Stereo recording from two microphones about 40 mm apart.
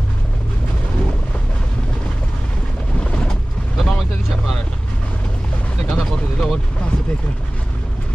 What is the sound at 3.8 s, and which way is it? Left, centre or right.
Vehicle, centre.